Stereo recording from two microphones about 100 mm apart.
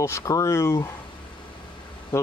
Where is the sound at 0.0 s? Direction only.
30° left (ahead or behind).